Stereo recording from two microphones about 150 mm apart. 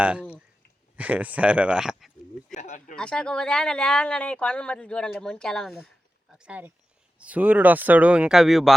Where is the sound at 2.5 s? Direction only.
55° left (ahead or behind).